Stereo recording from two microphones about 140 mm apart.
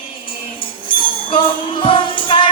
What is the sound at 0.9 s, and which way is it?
Music, 35° left (ahead or behind).